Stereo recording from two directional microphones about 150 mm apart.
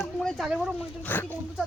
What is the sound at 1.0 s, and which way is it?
Speech, 15° left (ahead or behind).